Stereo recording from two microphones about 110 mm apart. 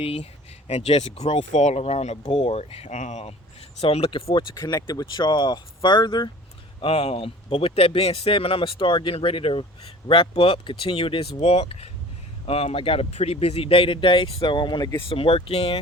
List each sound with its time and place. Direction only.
0.0 s speech: 65° left (ahead or behind)
0.7 s speech: 75° left (ahead or behind)
3.8 s speech: 65° left (ahead or behind)
4.5 s speech: 35° left (ahead or behind)
6.8 s speech: 70° left (ahead or behind); by 14.8 s 45° left (ahead or behind)
15.1 s speech: 55° left (ahead or behind)